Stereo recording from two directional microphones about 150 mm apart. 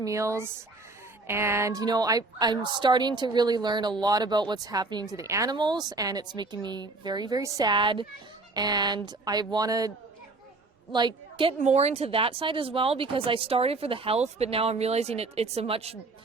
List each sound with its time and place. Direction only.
0.0 s a woman's voice: 20° right (ahead or behind)
10.9 s a woman's voice: 30° right (ahead or behind)
11.6 s speech: 45° right (ahead or behind)